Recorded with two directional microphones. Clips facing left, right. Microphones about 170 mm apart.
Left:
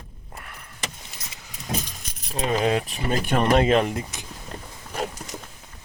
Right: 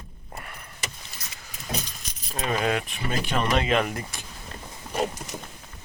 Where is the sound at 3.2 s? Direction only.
50° left (ahead or behind).